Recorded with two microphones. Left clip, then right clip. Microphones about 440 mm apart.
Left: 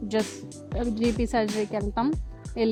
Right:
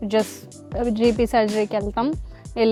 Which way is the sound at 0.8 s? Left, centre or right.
Centre.